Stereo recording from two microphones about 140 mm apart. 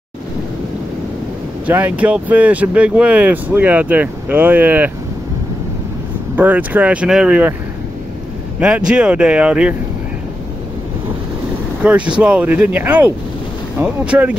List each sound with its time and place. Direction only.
1.7 s speech: 15° right (ahead or behind)
6.3 s speech: 10° right (ahead or behind)
8.5 s speech: 10° right (ahead or behind)
11.8 s speech: 10° right (ahead or behind)